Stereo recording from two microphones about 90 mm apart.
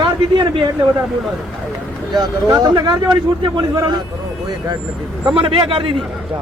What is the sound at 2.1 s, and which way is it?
Speech, 50° right (ahead or behind).